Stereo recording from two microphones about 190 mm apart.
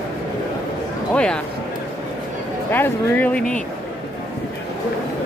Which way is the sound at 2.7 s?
10° left (ahead or behind).